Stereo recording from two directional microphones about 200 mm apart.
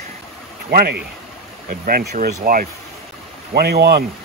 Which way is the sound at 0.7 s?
50° right (ahead or behind).